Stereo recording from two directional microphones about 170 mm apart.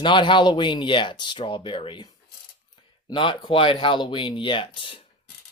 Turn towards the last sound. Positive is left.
turn(degrees=30)  # may be behind; listen again after turning